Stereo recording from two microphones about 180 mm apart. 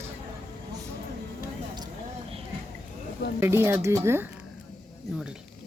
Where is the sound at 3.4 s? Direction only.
15° right (ahead or behind).